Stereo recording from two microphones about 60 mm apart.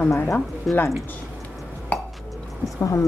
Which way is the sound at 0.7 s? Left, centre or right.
Centre.